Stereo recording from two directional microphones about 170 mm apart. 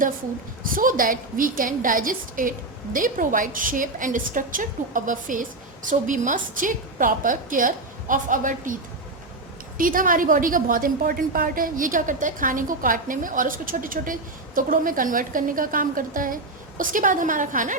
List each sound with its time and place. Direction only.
0.6 s a woman's voice: 55° right (ahead or behind)